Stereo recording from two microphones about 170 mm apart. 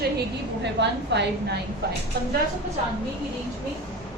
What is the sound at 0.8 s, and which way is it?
Speech, 85° right.